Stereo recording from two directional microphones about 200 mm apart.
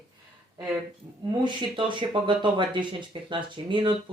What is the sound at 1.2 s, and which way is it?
Speech, 25° right (ahead or behind).